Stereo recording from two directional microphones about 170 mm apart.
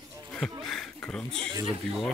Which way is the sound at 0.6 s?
Centre (ahead or behind).